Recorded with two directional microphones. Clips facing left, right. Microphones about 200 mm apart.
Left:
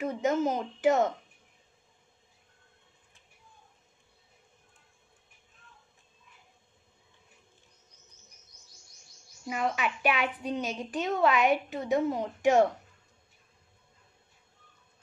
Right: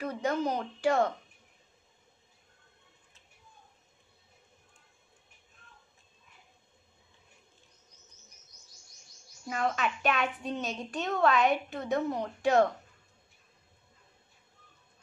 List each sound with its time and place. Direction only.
0.0 s speech: 20° left (ahead or behind)
9.5 s a woman's voice: 10° left (ahead or behind)